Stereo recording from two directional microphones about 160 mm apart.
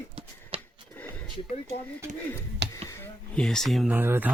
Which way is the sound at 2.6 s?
90° right.